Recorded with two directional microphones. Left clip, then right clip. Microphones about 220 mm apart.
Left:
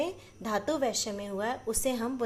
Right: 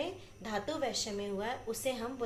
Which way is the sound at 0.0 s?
50° left (ahead or behind).